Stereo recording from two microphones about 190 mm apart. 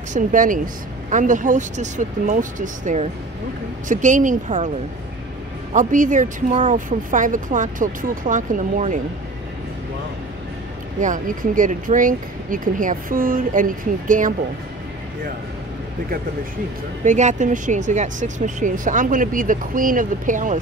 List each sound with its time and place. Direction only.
0.1 s speech: 45° right (ahead or behind)
5.7 s speech: 45° right (ahead or behind)
11.0 s speech: 45° right (ahead or behind)
17.0 s speech: 40° right (ahead or behind)